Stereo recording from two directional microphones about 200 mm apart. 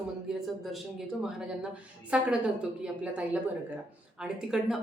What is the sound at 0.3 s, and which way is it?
A woman's voice, centre (ahead or behind).